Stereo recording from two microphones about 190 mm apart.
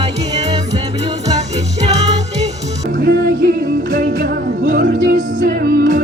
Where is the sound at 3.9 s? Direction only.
45° right (ahead or behind).